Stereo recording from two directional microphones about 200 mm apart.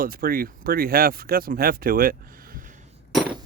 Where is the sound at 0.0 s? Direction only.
45° right (ahead or behind).